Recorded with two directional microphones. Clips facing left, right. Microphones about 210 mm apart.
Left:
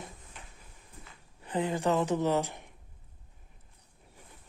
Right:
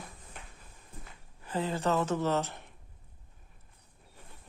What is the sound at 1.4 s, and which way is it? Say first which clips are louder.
Speech: left 2 dB; 15° left (ahead or behind).